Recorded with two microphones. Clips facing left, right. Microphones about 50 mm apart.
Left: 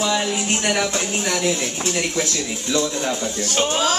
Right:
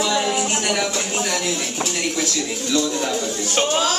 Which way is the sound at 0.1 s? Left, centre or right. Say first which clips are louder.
Right 1 dB; centre.